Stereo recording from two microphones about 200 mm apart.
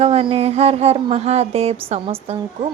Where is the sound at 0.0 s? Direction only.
30° right (ahead or behind).